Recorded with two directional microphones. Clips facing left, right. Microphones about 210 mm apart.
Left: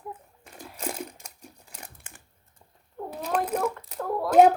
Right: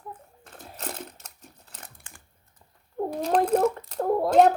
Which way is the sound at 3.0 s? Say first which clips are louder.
Right 7 dB; 45° right (ahead or behind).